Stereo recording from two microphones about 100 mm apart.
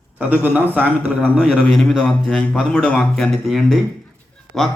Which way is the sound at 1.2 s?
5° right (ahead or behind).